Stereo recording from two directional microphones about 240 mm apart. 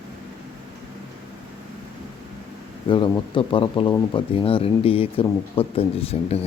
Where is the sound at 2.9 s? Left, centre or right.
Centre.